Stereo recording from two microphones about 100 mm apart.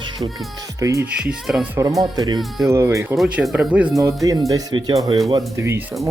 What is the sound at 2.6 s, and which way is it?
Speech, 30° right (ahead or behind).